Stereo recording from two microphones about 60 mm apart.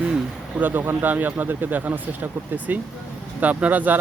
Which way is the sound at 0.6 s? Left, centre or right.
Right.